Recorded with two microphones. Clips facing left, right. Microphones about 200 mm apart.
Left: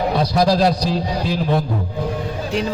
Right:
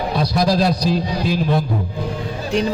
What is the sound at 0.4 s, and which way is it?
Speech, 10° left (ahead or behind).